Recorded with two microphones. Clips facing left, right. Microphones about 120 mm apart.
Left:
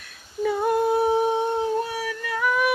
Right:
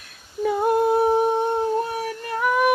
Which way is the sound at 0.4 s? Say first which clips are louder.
Right 2 dB; 50° right (ahead or behind).